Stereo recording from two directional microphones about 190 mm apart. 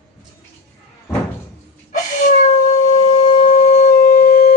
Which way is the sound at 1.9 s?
40° left (ahead or behind).